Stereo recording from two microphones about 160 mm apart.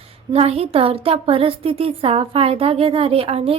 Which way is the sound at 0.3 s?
40° right (ahead or behind).